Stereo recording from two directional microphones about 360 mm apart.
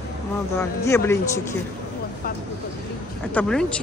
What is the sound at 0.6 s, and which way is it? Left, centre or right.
Speech, centre.